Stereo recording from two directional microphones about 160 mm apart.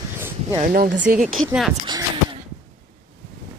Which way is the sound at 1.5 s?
Centre (ahead or behind).